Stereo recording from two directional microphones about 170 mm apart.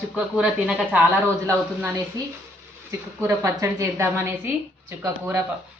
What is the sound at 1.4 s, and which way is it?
A woman's voice, 15° right (ahead or behind).